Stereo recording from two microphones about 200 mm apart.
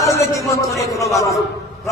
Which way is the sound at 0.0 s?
15° left (ahead or behind).